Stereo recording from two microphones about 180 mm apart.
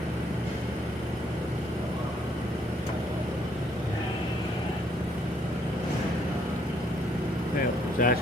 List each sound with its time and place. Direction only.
7.9 s speech: 50° left (ahead or behind)